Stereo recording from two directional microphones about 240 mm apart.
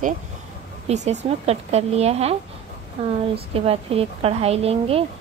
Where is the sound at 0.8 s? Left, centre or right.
Right.